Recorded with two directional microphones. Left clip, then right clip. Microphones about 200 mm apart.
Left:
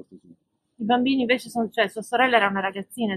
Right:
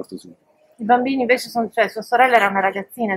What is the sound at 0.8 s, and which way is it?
A woman's voice, 5° left (ahead or behind).